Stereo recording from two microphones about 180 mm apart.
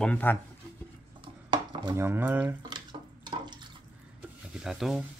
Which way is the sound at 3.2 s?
25° right (ahead or behind).